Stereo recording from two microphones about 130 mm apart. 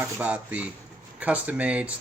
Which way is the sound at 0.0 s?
10° right (ahead or behind).